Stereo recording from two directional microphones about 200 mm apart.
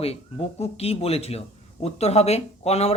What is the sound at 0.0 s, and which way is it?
Speech, 30° left (ahead or behind).